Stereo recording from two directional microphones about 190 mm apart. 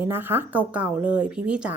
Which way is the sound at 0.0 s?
10° right (ahead or behind).